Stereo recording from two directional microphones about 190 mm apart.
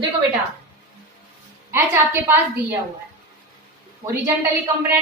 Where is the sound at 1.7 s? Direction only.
10° right (ahead or behind).